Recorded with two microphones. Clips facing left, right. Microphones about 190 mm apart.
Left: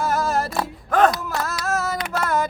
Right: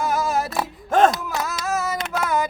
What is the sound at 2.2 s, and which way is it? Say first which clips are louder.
Music: even; centre (ahead or behind).